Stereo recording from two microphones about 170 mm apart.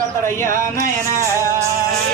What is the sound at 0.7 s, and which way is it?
Music, 20° left (ahead or behind).